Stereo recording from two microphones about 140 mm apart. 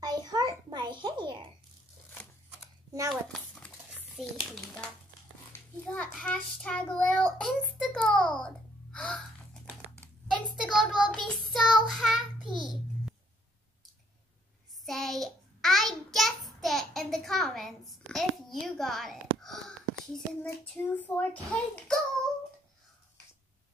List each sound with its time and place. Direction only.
0.0 s a sound: 30° right (ahead or behind)
3.1 s a sound: 5° left (ahead or behind)
5.5 s a child's voice: 10° left (ahead or behind)
8.4 s typing: 5° left (ahead or behind)
10.5 s child singing: centre (ahead or behind)
10.9 s child singing: 35° right (ahead or behind)
11.2 s child singing: centre (ahead or behind)
12.4 s a sound: centre (ahead or behind)
14.9 s child singing: centre (ahead or behind)
20.4 s a child's voice: 10° left (ahead or behind)